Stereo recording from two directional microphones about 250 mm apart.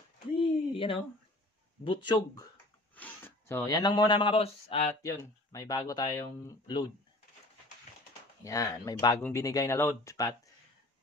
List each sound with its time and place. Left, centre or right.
0.4 s a sound: left
3.0 s speech: centre; by 4.8 s left
5.0 s speech: centre
8.5 s speech: centre